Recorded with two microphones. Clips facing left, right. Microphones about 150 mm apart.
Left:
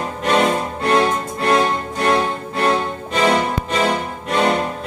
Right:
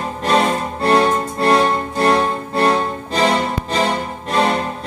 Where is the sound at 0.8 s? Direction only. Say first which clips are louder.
Right 3 dB; 35° right (ahead or behind).